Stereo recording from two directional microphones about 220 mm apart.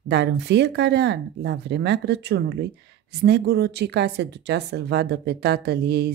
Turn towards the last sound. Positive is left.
turn(degrees=-45)  # may be behind; listen again after turning